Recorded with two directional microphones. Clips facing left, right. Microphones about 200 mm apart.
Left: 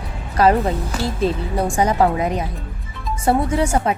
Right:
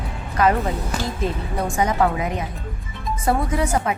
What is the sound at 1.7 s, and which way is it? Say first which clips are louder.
A woman's voice: left 2 dB; 35° left (ahead or behind).